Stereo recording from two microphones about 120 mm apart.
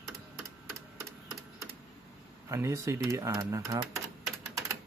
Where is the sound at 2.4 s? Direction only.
25° right (ahead or behind).